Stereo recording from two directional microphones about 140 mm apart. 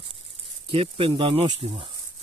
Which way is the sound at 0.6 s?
40° right (ahead or behind).